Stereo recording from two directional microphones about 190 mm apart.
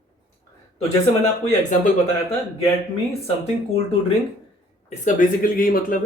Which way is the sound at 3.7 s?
30° left (ahead or behind).